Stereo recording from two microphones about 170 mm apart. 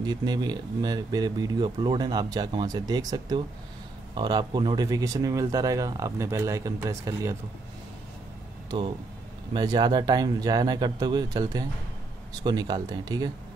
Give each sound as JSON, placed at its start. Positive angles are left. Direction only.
{"t": 0.0, "sound": "speech", "side_deg": -25}
{"t": 8.6, "sound": "speech", "side_deg": -30}